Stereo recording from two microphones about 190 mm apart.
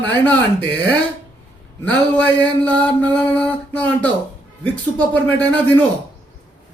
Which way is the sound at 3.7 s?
10° left (ahead or behind).